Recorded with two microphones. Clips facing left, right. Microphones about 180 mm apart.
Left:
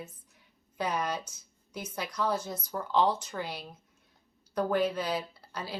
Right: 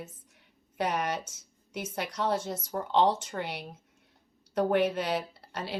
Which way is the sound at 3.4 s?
70° right (ahead or behind).